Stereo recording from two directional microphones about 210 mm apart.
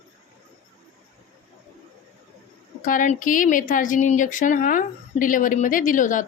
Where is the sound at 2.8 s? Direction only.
40° left (ahead or behind).